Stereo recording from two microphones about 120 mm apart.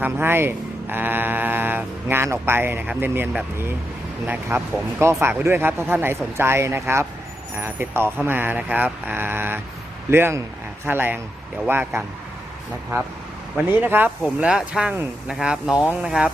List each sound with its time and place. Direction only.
0.0 s speech: 20° right (ahead or behind)
13.7 s speech: 15° right (ahead or behind)